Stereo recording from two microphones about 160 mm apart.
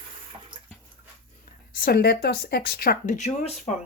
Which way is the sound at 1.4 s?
60° left (ahead or behind).